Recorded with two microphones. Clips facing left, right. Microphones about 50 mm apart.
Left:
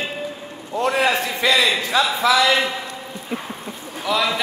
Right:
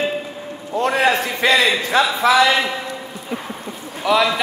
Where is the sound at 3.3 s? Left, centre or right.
Centre.